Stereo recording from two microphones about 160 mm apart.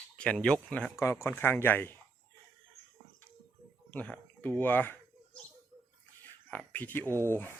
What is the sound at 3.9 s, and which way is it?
Speech, 10° left (ahead or behind).